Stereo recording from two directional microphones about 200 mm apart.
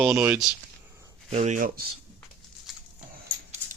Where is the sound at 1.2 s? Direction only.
35° right (ahead or behind).